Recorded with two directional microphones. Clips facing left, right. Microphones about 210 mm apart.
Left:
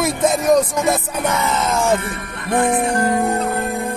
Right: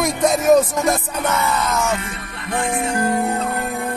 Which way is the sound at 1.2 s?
15° left (ahead or behind).